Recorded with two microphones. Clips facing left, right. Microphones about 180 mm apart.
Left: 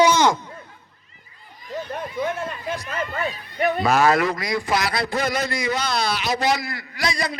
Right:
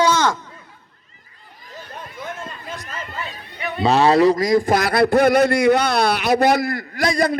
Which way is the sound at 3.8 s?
30° right (ahead or behind).